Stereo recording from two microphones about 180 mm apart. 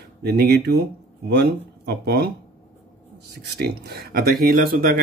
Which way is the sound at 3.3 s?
60° right (ahead or behind).